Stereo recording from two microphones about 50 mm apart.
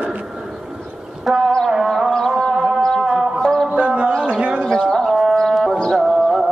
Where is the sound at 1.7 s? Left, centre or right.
Centre.